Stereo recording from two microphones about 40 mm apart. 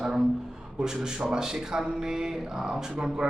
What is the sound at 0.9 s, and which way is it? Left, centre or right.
Speech, centre.